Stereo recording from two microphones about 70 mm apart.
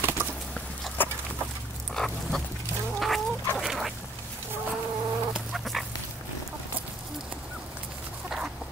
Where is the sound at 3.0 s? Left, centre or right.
Centre.